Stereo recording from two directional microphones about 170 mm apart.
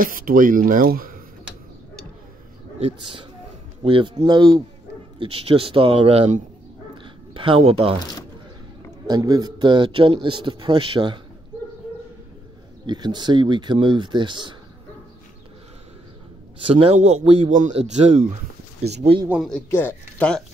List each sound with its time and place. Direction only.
0.0 s speech: 55° right (ahead or behind)
2.8 s a man's voice: 30° right (ahead or behind)
9.0 s a man's voice: 20° right (ahead or behind)
12.8 s a man's voice: 25° right (ahead or behind)
16.6 s speech: 35° right (ahead or behind)
19.2 s speech: 5° right (ahead or behind)
19.5 s speech: 10° left (ahead or behind)